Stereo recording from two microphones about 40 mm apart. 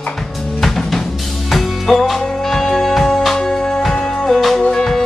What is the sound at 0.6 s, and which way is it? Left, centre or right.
Drum kit, centre.